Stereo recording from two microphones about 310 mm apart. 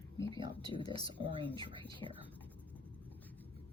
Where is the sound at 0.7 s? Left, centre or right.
Centre.